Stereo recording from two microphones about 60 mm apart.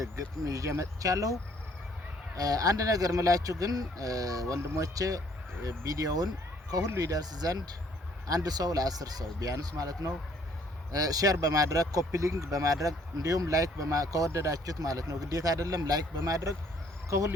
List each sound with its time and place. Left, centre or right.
0.0 s speech: right
2.3 s speech: right
16.2 s speech: right
17.1 s speech: right